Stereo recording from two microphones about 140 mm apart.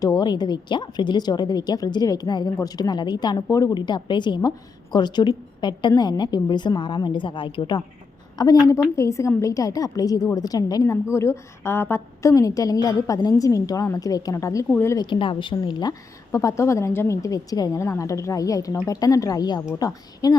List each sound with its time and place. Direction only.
0.0 s a woman's voice: 30° left (ahead or behind)
15.0 s a woman's voice: 35° left (ahead or behind)